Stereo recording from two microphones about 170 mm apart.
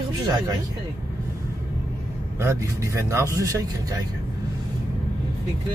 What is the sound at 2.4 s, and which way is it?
Speech, 15° right (ahead or behind).